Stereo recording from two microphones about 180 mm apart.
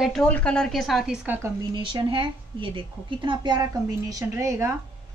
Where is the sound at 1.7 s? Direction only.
25° right (ahead or behind).